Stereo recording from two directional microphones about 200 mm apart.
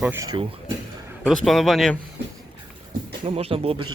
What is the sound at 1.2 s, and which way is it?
Speech, 5° left (ahead or behind).